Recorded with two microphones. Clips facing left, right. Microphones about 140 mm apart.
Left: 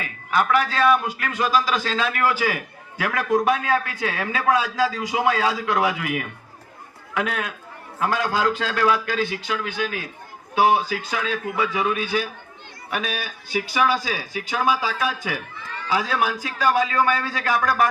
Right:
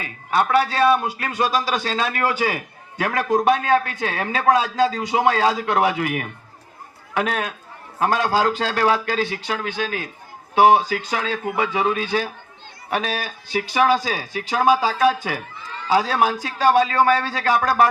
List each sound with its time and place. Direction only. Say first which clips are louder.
0.0 s a man's voice: right 2 dB; 30° right (ahead or behind)